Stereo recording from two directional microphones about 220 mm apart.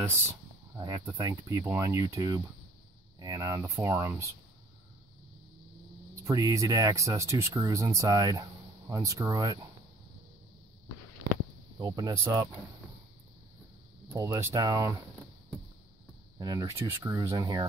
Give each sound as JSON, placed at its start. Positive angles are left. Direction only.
{"t": 0.7, "sound": "speech", "side_deg": -15}
{"t": 6.2, "sound": "speech", "side_deg": -15}
{"t": 11.8, "sound": "speech", "side_deg": -15}
{"t": 14.1, "sound": "speech", "side_deg": -10}
{"t": 16.3, "sound": "speech", "side_deg": -15}